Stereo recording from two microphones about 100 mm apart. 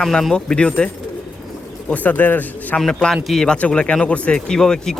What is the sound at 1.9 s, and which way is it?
Speech, 15° left (ahead or behind).